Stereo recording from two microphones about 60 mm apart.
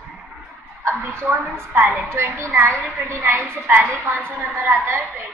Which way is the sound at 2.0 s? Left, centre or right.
Right.